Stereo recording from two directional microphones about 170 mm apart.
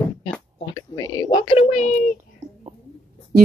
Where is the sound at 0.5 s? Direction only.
20° left (ahead or behind); by 2.1 s 40° left (ahead or behind).